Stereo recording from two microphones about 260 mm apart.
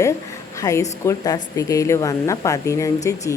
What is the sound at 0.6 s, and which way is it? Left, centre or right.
Speech, centre.